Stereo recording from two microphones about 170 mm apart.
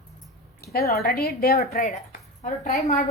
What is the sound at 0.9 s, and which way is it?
A woman's voice, 65° left (ahead or behind).